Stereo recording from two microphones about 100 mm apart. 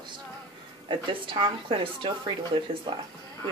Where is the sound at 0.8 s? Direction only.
55° right (ahead or behind).